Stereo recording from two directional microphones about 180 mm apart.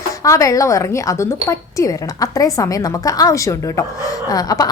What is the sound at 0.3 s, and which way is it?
A woman's voice, 20° left (ahead or behind).